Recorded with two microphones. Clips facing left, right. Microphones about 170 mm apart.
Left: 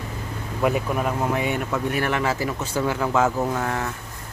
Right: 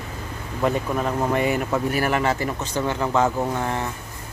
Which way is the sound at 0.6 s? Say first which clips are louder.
Even; 10° left (ahead or behind).